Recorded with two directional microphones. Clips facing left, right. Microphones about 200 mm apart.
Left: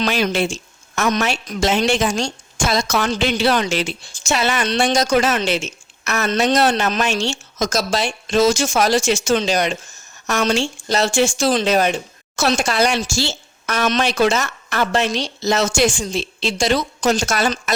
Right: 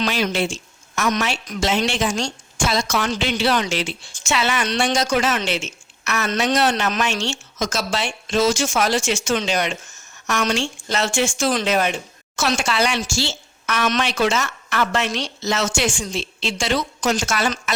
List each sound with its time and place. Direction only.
0.1 s a woman's voice: 50° left (ahead or behind)